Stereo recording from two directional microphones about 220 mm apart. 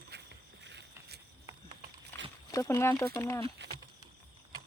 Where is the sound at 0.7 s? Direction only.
50° right (ahead or behind).